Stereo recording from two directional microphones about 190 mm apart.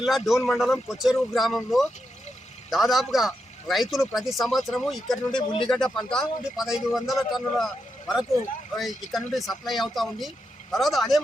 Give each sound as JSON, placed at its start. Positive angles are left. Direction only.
{"t": 0.0, "sound": "a man's voice", "side_deg": 0}
{"t": 5.3, "sound": "speech", "side_deg": 25}
{"t": 5.6, "sound": "a man's voice", "side_deg": 5}